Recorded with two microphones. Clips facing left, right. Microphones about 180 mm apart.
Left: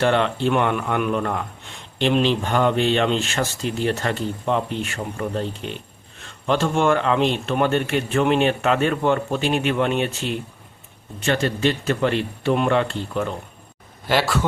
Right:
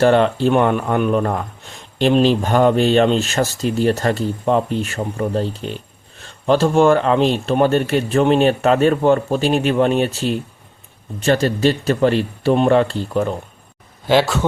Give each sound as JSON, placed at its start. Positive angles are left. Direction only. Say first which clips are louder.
{"t": 0.0, "sound": "speech", "louder": "right 6 dB", "side_deg": -40}